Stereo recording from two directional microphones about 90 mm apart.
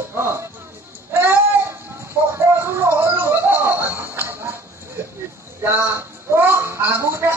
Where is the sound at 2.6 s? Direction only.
25° right (ahead or behind).